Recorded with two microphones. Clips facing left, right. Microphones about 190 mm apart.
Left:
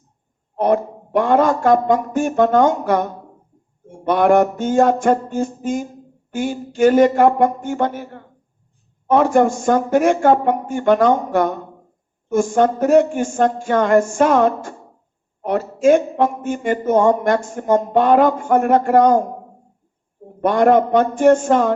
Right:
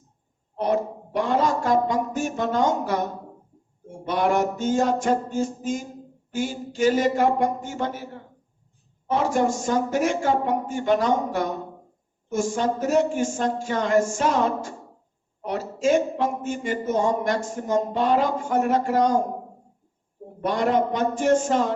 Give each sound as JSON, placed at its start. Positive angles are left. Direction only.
{"t": 0.5, "sound": "a man's voice", "side_deg": 55}
{"t": 20.4, "sound": "a man's voice", "side_deg": 55}